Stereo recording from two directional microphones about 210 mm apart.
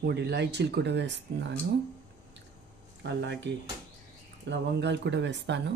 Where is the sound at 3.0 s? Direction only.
55° right (ahead or behind).